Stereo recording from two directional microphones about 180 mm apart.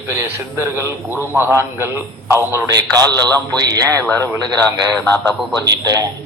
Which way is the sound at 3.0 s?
10° left (ahead or behind).